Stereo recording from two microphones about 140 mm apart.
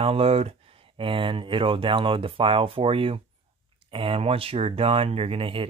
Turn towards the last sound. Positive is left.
turn(degrees=-40)  # may be behind; listen again after turning